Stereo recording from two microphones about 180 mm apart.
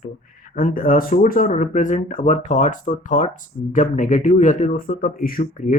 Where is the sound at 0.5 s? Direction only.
50° left (ahead or behind).